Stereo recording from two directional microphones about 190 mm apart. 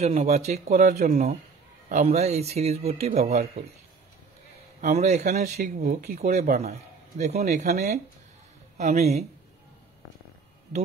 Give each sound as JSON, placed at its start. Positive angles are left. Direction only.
{"t": 0.0, "sound": "speech", "side_deg": -35}
{"t": 4.8, "sound": "speech", "side_deg": -35}
{"t": 5.8, "sound": "speech", "side_deg": -45}